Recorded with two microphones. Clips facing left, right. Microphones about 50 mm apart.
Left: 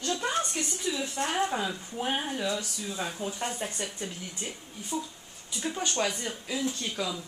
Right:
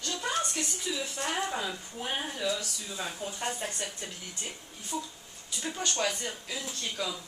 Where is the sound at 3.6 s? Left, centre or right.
Centre.